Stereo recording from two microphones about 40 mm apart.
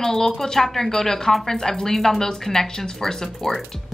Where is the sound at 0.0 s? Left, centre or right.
Centre.